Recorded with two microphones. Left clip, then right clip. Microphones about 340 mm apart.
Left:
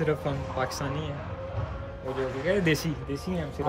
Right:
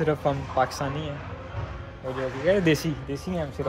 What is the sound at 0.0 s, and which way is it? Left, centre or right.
Speech, centre.